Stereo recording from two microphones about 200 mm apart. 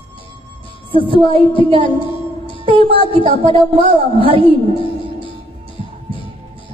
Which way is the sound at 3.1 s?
25° right (ahead or behind).